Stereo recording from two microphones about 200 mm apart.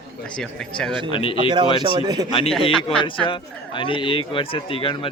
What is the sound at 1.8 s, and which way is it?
Speech, 20° right (ahead or behind).